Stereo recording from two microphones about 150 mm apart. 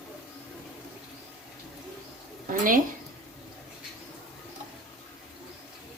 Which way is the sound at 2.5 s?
65° right (ahead or behind).